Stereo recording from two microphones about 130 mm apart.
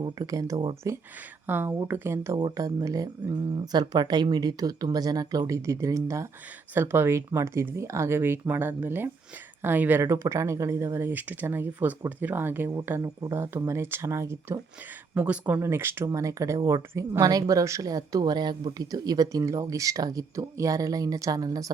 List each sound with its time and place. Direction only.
0.0 s speech: 30° right (ahead or behind)